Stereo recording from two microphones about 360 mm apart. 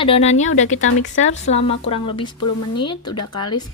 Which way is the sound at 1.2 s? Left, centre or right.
Centre.